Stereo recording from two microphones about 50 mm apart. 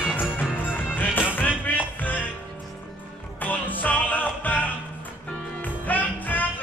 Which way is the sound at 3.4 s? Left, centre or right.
Left.